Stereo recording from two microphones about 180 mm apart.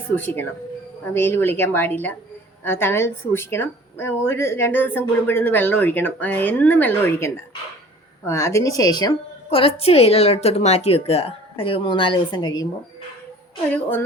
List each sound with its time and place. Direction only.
0.2 s a woman's voice: 10° left (ahead or behind)